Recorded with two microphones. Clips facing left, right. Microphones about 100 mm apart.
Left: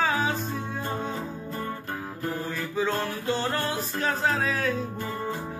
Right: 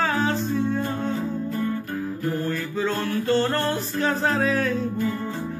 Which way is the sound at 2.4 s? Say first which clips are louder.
Right 3 dB; 15° left (ahead or behind).